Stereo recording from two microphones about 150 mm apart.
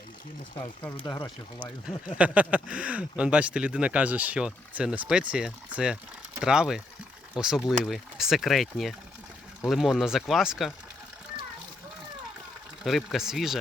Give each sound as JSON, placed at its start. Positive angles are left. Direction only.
{"t": 0.8, "sound": "speech", "side_deg": 30}
{"t": 2.1, "sound": "speech", "side_deg": -10}
{"t": 12.8, "sound": "speech", "side_deg": 0}